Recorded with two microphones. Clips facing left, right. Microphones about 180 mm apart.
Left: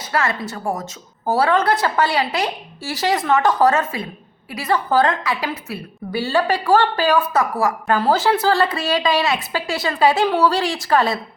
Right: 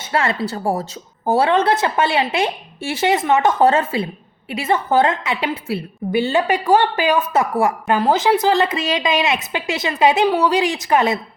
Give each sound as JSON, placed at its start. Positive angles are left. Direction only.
{"t": 0.0, "sound": "a woman's voice", "side_deg": -25}